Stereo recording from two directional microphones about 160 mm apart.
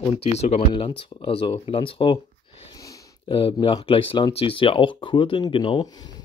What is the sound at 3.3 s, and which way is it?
Speech, 35° left (ahead or behind).